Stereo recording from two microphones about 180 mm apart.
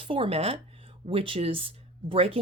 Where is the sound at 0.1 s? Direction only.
30° right (ahead or behind).